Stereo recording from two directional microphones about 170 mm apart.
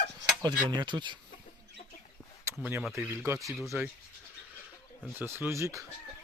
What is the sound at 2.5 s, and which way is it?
Speech, 15° right (ahead or behind).